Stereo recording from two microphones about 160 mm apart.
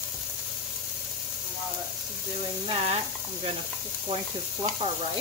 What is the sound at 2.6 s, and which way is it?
Speech, 35° right (ahead or behind).